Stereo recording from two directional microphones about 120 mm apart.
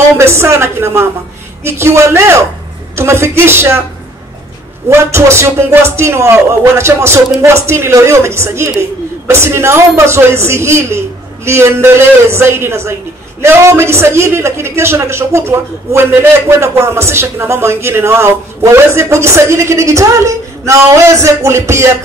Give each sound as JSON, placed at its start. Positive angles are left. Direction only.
{"t": 0.2, "sound": "a man's voice", "side_deg": -20}
{"t": 4.8, "sound": "a man's voice", "side_deg": -20}